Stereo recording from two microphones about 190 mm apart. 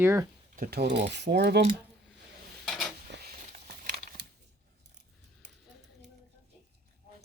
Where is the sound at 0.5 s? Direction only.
50° right (ahead or behind).